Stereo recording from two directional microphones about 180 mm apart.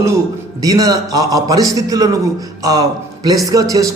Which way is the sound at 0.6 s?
20° right (ahead or behind).